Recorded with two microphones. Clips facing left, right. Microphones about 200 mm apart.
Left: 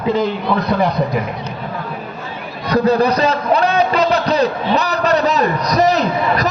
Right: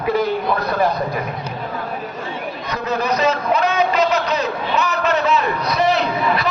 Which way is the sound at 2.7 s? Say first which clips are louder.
Left 9 dB; 35° left (ahead or behind).